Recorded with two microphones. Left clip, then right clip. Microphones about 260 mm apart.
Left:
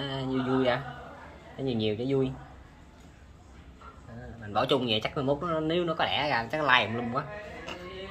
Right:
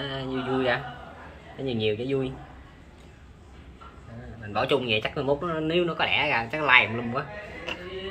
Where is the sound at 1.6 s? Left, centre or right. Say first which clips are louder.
Right 3 dB; left.